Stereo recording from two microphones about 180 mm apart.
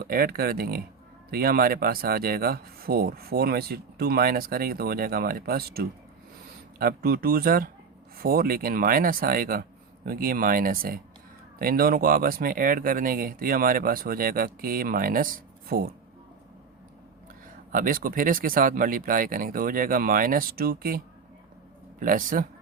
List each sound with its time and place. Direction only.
0.0 s speech: 55° right (ahead or behind)
17.7 s speech: 50° right (ahead or behind)
22.0 s speech: 50° right (ahead or behind)